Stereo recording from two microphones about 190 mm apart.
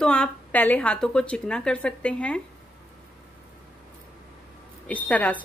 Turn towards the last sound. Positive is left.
turn(degrees=10)  # may be behind; listen again after turning